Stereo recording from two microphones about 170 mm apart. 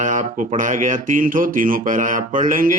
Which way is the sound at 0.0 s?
50° right (ahead or behind).